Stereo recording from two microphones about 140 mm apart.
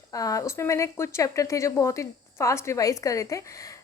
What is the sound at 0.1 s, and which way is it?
A woman's voice, 25° left (ahead or behind).